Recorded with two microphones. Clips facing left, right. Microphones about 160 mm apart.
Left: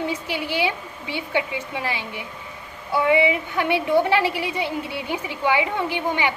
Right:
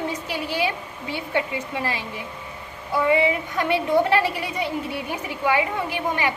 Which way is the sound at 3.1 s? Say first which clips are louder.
Left 1 dB; 15° left (ahead or behind).